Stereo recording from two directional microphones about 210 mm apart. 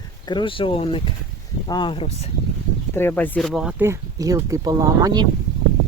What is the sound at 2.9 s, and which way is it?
Speech, 10° left (ahead or behind).